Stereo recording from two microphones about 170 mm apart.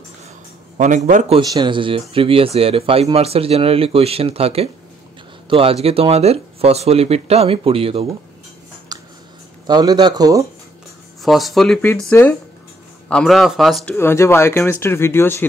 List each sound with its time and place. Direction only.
0.7 s a man's voice: 45° right (ahead or behind)
1.4 s speech: 25° right (ahead or behind)
8.9 s a sound: 25° right (ahead or behind)
9.7 s a man's voice: 25° right (ahead or behind)
11.2 s speech: centre (ahead or behind)
13.1 s speech: centre (ahead or behind)
13.9 s speech: 15° left (ahead or behind)